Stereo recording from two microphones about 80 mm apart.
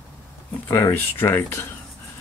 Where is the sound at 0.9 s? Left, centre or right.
Left.